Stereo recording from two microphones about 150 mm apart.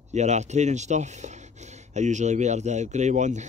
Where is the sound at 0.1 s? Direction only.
50° right (ahead or behind).